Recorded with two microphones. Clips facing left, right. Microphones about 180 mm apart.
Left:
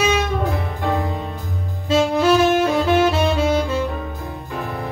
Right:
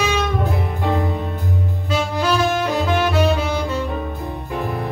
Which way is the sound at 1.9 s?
25° left (ahead or behind).